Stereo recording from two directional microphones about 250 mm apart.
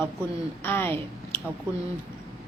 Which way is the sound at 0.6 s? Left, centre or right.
Centre.